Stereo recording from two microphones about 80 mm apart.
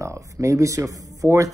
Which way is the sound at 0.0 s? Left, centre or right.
Right.